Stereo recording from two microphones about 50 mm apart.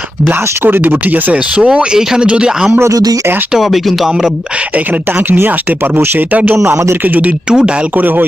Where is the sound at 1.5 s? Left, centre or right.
Right.